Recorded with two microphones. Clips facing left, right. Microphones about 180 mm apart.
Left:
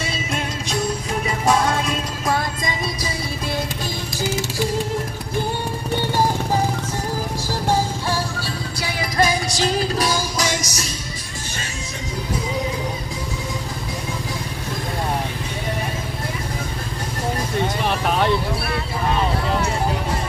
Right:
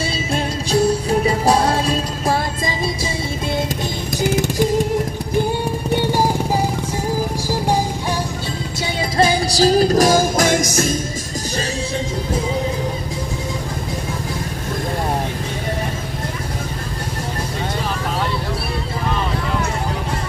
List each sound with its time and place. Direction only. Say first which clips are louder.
0.3 s music: right 8 dB; 30° right (ahead or behind)
5.9 s music: right 2 dB; 10° right (ahead or behind)
9.1 s music: right 3 dB; 30° right (ahead or behind); by 11.0 s 50° right (ahead or behind)